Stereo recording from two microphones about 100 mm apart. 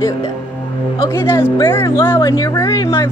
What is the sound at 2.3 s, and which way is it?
Speech, 35° left (ahead or behind).